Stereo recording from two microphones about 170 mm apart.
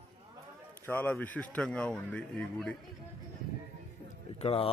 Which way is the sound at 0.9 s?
10° left (ahead or behind).